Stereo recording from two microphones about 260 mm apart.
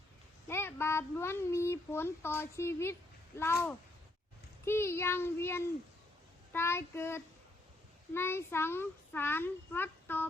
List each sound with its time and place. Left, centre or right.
0.4 s a child's voice: centre